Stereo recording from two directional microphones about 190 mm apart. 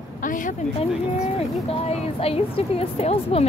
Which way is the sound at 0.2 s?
45° left (ahead or behind).